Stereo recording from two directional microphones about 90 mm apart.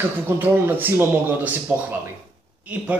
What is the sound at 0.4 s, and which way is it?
Speech, 20° right (ahead or behind).